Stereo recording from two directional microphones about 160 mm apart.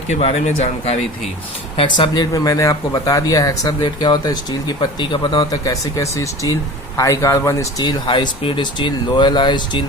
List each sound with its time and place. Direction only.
0.1 s speech: 40° left (ahead or behind)